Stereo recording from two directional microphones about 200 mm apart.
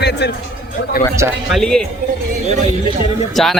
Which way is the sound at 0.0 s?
55° left (ahead or behind).